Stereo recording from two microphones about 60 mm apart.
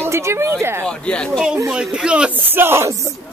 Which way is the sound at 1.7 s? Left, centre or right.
Centre.